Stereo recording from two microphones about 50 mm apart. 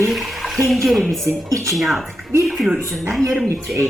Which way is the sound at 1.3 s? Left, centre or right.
Right.